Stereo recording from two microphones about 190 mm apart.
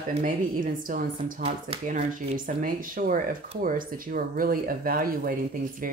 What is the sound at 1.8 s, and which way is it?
Speech, 45° right (ahead or behind).